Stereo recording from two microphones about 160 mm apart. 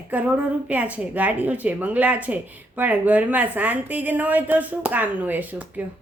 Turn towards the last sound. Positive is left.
turn(degrees=-10)  # may be behind; listen again after turning